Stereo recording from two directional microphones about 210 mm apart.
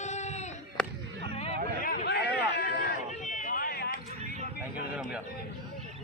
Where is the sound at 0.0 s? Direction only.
35° left (ahead or behind).